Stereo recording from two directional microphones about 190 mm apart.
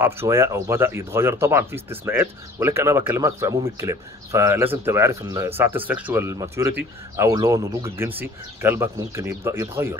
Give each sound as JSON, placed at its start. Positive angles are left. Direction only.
{"t": 0.0, "sound": "speech", "side_deg": -15}